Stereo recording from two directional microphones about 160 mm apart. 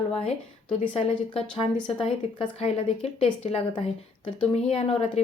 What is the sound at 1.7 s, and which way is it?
A woman's voice, 30° left (ahead or behind).